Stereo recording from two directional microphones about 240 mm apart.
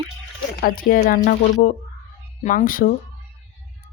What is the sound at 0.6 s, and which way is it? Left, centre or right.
Speech, left.